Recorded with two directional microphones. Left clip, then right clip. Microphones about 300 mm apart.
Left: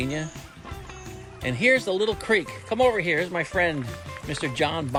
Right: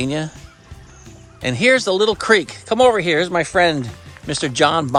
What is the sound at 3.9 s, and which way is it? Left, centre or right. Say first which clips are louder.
Speech: right 6 dB; centre.